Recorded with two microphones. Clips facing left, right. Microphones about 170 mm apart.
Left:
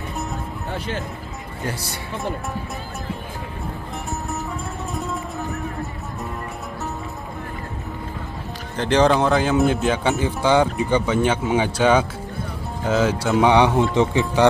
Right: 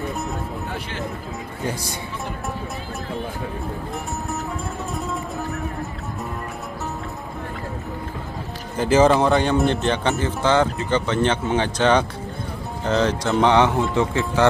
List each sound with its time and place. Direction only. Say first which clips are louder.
1.7 s speech: right 1 dB; 15° right (ahead or behind)
4.9 s music: left 1 dB; centre (ahead or behind)
8.7 s a man's voice: right 1 dB; 5° right (ahead or behind); by 14.4 s 20° left (ahead or behind)